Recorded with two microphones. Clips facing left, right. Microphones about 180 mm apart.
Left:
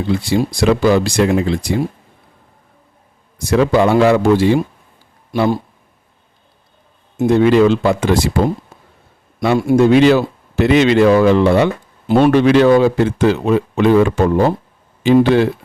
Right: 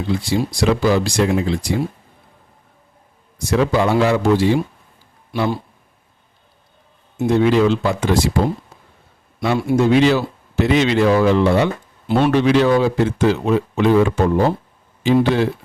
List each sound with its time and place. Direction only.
0.3 s speech: 60° left (ahead or behind)
3.5 s speech: 60° left (ahead or behind)
5.3 s a man's voice: 45° left (ahead or behind)
7.2 s speech: 55° left (ahead or behind)
9.4 s speech: 55° left (ahead or behind)
12.0 s speech: 50° left (ahead or behind)